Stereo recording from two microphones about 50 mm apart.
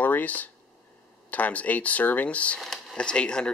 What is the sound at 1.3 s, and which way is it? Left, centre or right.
Speech, left.